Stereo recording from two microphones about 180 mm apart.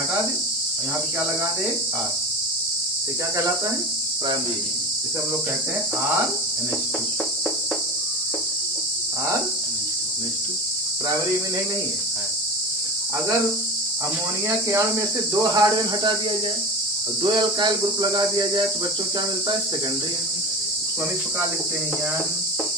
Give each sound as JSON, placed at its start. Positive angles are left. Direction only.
{"t": 15.4, "sound": "cricket", "side_deg": -20}
{"t": 17.2, "sound": "cricket", "side_deg": -25}